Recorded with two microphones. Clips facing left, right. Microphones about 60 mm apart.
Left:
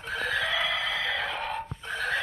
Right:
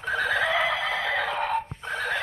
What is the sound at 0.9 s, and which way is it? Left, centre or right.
Music, right.